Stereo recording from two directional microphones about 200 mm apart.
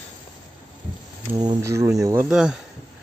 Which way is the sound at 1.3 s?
15° right (ahead or behind).